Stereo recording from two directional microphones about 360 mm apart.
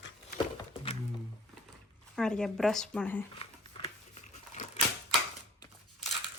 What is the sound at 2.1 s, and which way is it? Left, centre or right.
Speech, centre.